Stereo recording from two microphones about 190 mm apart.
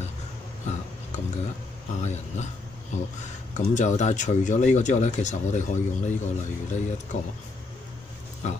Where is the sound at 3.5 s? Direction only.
40° left (ahead or behind).